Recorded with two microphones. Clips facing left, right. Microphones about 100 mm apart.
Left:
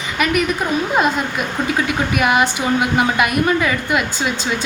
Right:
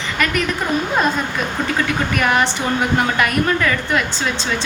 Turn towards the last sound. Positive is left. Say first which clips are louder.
# left 1 dB
turn(degrees=10)  # may be behind; listen again after turning